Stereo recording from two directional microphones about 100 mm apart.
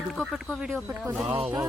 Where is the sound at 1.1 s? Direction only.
15° right (ahead or behind).